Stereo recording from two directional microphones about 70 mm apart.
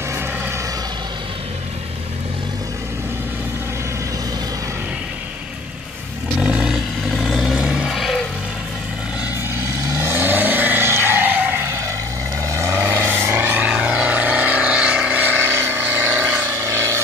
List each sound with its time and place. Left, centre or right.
6.4 s vehicle: centre
6.7 s vehicle: centre
7.9 s vehicle: centre
9.6 s vehicle: right
12.4 s vehicle: right
13.8 s vehicle: right
16.6 s a sound: right